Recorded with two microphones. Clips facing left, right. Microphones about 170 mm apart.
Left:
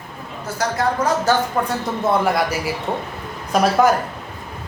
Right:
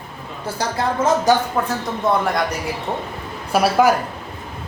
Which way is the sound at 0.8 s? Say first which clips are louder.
Right 2 dB; 20° right (ahead or behind).